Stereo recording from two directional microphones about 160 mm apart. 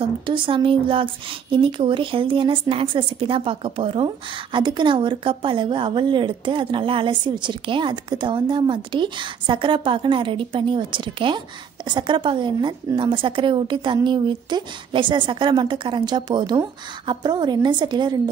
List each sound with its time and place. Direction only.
0.0 s a woman's voice: 30° right (ahead or behind)